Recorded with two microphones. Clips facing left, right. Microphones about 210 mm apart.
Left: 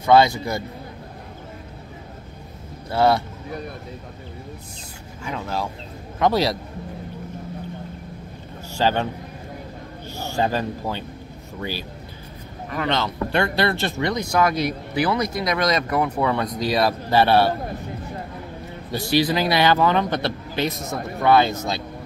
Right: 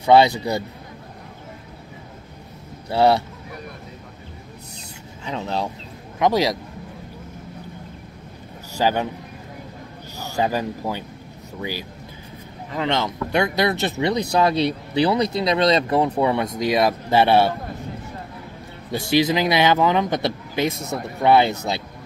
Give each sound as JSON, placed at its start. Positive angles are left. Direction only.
{"t": 0.0, "sound": "speech", "side_deg": -20}
{"t": 5.2, "sound": "speech", "side_deg": -25}
{"t": 8.8, "sound": "speech", "side_deg": -10}
{"t": 10.4, "sound": "speech", "side_deg": -10}
{"t": 12.7, "sound": "speech", "side_deg": -20}
{"t": 14.3, "sound": "speech", "side_deg": -30}
{"t": 18.9, "sound": "speech", "side_deg": -20}